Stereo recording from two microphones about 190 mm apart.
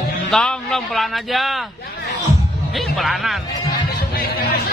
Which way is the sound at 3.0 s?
Centre (ahead or behind).